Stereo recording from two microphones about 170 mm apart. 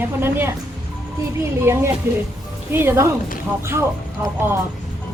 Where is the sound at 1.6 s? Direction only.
15° right (ahead or behind).